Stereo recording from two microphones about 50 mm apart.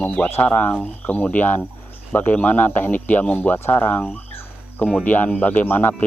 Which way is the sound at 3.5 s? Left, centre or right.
Left.